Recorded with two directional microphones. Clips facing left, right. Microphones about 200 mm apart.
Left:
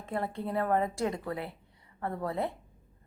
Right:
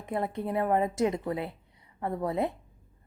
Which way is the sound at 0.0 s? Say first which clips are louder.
Right 3 dB; 20° right (ahead or behind).